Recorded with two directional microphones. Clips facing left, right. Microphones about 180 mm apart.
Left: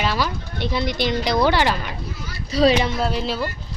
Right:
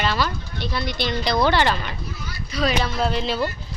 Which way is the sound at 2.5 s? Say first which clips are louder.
Left 7 dB; 35° left (ahead or behind).